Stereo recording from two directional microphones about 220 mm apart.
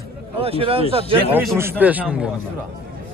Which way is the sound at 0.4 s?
25° right (ahead or behind).